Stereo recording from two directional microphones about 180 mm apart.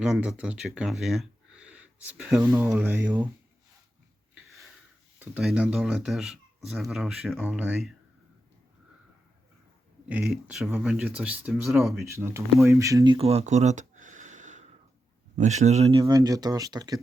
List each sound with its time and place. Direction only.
0.0 s speech: centre (ahead or behind)
2.4 s speech: 15° right (ahead or behind)
4.4 s a sound: centre (ahead or behind)
5.2 s speech: 5° right (ahead or behind)
10.1 s speech: 5° right (ahead or behind)
12.0 s speech: 15° right (ahead or behind)
13.1 s a sound: 35° right (ahead or behind)
15.4 s speech: 40° right (ahead or behind)
16.0 s speech: 20° right (ahead or behind)